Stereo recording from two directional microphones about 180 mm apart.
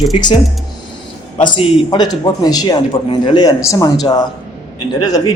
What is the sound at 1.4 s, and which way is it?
A man's voice, 25° left (ahead or behind).